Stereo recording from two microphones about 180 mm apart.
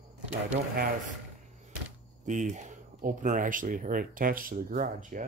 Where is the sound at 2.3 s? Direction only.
40° right (ahead or behind).